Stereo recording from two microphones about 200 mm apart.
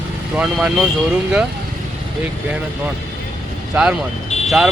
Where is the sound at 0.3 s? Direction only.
Centre (ahead or behind).